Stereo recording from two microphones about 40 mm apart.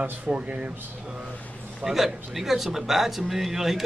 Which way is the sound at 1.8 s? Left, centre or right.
Centre.